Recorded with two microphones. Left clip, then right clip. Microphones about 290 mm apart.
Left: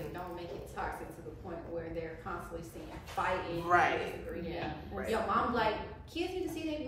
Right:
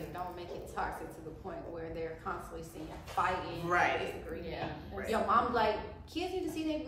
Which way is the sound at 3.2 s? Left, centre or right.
Centre.